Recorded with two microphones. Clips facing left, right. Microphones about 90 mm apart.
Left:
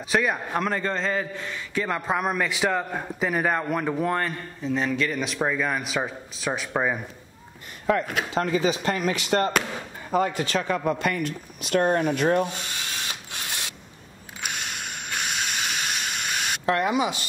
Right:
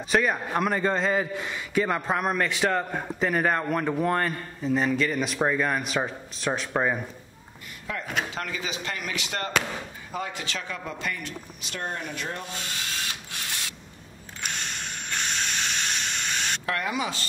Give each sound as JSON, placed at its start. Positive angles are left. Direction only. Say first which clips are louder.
{"t": 0.1, "sound": "a man's voice", "louder": "even", "side_deg": 0}
{"t": 7.9, "sound": "speech", "louder": "left 11 dB", "side_deg": 55}
{"t": 8.4, "sound": "speech", "louder": "left 9 dB", "side_deg": 35}
{"t": 14.4, "sound": "mechanisms", "louder": "left 1 dB", "side_deg": 5}
{"t": 16.6, "sound": "speech", "louder": "left 8 dB", "side_deg": 25}